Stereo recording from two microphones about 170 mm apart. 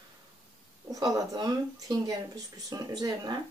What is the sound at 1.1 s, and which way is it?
Speech, 20° right (ahead or behind).